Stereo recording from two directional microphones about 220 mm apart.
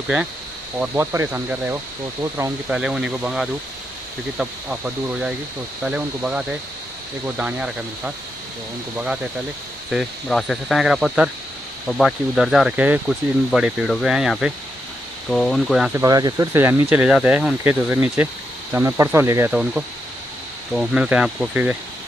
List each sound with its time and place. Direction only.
0.7 s speech: 10° right (ahead or behind)
15.9 s speech: 15° right (ahead or behind)